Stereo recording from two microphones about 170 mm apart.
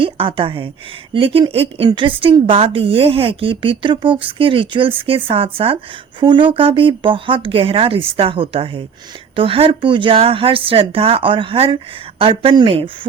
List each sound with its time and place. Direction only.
0.0 s a woman's voice: 30° right (ahead or behind)